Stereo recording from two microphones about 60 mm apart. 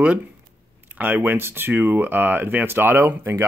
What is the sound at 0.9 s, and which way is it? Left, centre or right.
Speech, right.